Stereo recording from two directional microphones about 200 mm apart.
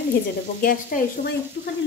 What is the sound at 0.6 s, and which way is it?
Sizzle, 45° left (ahead or behind).